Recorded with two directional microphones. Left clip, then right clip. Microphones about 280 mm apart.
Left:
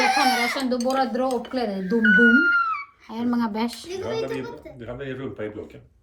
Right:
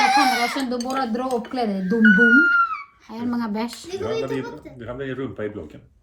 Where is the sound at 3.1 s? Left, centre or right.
Centre.